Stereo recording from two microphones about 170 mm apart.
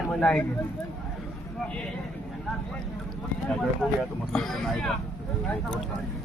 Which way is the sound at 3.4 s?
5° left (ahead or behind).